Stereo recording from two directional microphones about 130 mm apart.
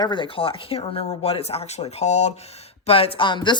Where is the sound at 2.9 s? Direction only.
45° left (ahead or behind).